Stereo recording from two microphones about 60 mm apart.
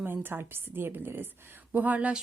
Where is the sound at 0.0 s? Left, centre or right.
Right.